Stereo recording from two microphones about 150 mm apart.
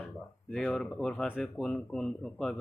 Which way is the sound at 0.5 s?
5° left (ahead or behind).